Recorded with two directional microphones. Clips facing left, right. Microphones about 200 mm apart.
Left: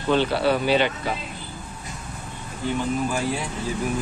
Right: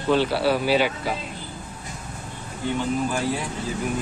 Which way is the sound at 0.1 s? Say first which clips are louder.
Even; 5° right (ahead or behind).